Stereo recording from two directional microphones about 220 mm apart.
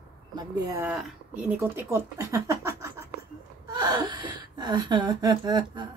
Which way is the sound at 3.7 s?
20° right (ahead or behind).